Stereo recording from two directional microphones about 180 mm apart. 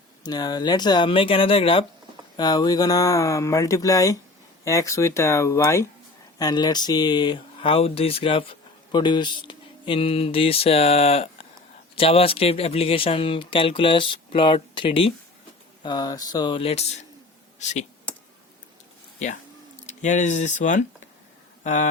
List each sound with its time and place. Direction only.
0.2 s speech: 20° left (ahead or behind)
19.9 s speech: 40° left (ahead or behind)